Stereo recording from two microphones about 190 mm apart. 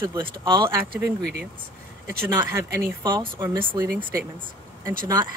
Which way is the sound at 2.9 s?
15° right (ahead or behind).